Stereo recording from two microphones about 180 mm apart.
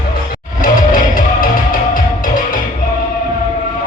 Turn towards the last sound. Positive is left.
turn(degrees=50)  # may be behind; listen again after turning